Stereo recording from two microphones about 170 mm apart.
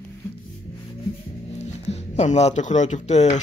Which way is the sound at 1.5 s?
40° left (ahead or behind).